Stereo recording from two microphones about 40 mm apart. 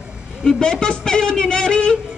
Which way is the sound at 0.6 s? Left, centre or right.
Left.